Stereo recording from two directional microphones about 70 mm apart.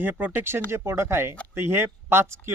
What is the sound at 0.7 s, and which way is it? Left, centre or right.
Speech, right.